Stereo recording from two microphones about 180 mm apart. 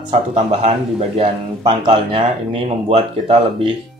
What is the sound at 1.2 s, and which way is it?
Speech, 30° right (ahead or behind).